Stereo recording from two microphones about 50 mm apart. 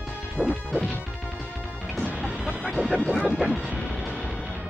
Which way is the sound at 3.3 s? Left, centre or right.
Centre.